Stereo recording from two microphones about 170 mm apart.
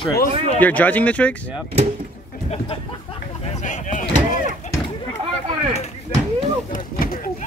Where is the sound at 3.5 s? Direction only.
45° left (ahead or behind).